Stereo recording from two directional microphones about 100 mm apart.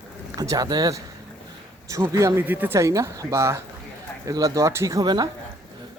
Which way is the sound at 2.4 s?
20° right (ahead or behind).